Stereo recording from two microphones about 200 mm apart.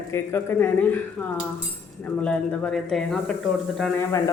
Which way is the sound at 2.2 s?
5° left (ahead or behind).